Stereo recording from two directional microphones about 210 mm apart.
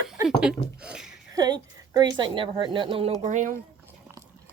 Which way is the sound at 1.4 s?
20° right (ahead or behind).